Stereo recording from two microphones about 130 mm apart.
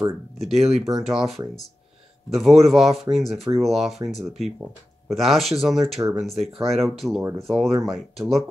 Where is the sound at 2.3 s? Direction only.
Centre (ahead or behind).